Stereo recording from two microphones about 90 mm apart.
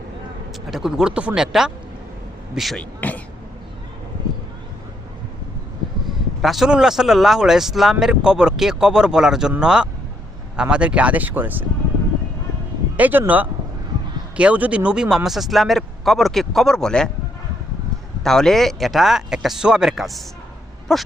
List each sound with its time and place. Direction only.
0.7 s speech: 5° right (ahead or behind)
3.0 s a sound: 15° left (ahead or behind)
6.4 s speech: centre (ahead or behind); by 11.6 s 20° right (ahead or behind)
13.0 s speech: 20° right (ahead or behind); by 17.1 s 5° left (ahead or behind)
18.2 s speech: 5° left (ahead or behind)